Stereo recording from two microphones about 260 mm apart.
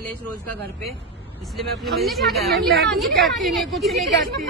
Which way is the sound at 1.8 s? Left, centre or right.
Centre.